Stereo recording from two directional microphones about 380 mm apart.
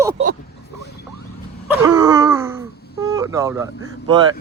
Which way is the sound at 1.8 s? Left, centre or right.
Centre.